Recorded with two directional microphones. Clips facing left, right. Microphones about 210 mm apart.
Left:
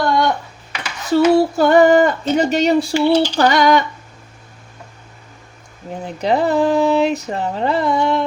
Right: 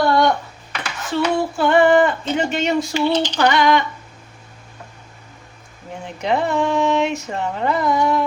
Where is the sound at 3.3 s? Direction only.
40° left (ahead or behind).